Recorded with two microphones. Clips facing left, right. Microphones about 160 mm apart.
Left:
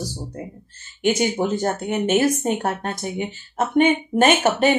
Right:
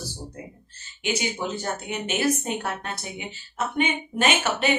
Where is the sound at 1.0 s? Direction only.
50° left (ahead or behind).